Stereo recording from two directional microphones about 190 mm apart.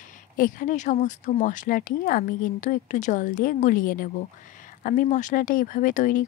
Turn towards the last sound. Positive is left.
turn(degrees=45)  # may be behind; listen again after turning